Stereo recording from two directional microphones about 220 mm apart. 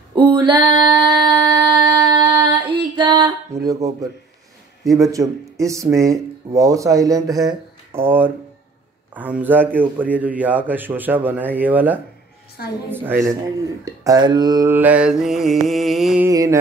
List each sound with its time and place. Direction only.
0.1 s female singing: 20° right (ahead or behind)
4.8 s speech: 15° right (ahead or behind)
12.6 s a woman's voice: 45° left (ahead or behind)
12.9 s speech: 10° right (ahead or behind)
13.8 s mantra: 15° right (ahead or behind)
16.3 s speech: 15° right (ahead or behind)